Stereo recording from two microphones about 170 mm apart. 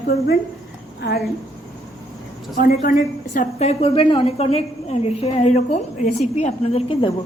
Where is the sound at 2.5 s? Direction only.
60° left (ahead or behind).